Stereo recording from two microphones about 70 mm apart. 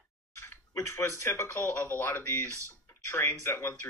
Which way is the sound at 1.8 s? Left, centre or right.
Left.